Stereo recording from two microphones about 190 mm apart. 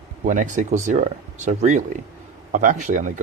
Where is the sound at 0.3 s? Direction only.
40° right (ahead or behind).